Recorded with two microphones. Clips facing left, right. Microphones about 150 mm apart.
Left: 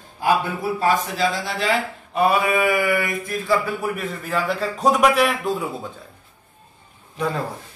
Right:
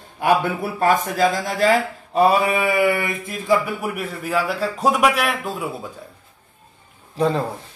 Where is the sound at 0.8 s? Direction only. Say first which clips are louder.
Right 4 dB; 50° right (ahead or behind); by 5.5 s centre (ahead or behind).